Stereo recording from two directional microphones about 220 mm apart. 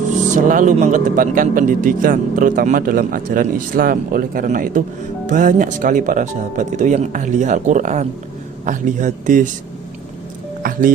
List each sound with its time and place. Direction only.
0.3 s speech: 35° right (ahead or behind)
10.6 s music: 40° right (ahead or behind)